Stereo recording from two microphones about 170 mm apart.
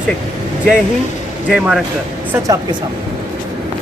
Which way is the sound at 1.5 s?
5° right (ahead or behind).